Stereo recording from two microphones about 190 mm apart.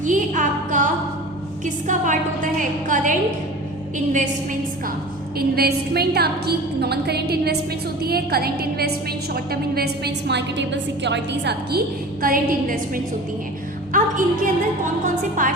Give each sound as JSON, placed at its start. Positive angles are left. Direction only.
{"t": 0.0, "sound": "a sound", "side_deg": -40}
{"t": 1.6, "sound": "a woman's voice", "side_deg": -40}
{"t": 5.4, "sound": "a woman's voice", "side_deg": -55}
{"t": 12.2, "sound": "a woman's voice", "side_deg": -50}